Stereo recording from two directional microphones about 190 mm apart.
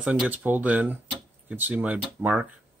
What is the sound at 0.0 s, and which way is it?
Speech, 5° right (ahead or behind).